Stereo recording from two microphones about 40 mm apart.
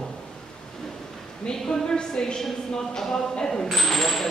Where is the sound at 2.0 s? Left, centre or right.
Left.